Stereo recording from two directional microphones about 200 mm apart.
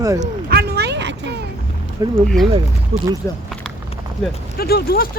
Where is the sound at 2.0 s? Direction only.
15° right (ahead or behind).